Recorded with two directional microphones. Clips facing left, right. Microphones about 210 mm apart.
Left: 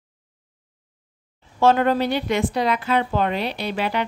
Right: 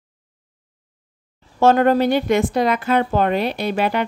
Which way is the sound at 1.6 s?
45° right (ahead or behind).